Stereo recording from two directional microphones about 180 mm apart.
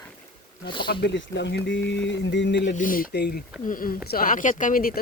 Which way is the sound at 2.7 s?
50° left (ahead or behind).